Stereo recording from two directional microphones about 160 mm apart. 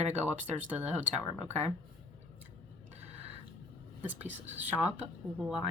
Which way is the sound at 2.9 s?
40° right (ahead or behind).